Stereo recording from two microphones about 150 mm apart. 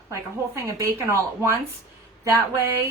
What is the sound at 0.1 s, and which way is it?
Speech, 20° right (ahead or behind).